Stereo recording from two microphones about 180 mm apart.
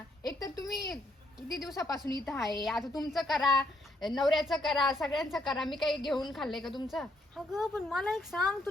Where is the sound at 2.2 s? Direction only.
5° left (ahead or behind).